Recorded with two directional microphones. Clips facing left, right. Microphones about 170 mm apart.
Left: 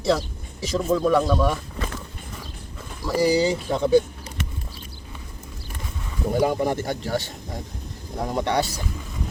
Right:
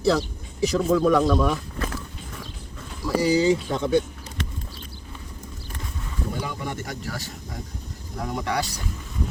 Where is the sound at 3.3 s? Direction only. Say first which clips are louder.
Right 1 dB; 35° left (ahead or behind).